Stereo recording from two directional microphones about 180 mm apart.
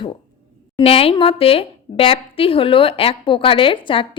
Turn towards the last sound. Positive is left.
turn(degrees=30)  # may be behind; listen again after turning